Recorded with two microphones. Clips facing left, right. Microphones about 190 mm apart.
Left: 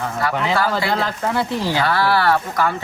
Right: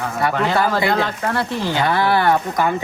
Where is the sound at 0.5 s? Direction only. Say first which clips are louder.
Right 2 dB; 20° right (ahead or behind).